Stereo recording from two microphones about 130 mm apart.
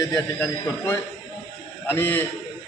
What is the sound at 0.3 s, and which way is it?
A man's voice, 10° left (ahead or behind).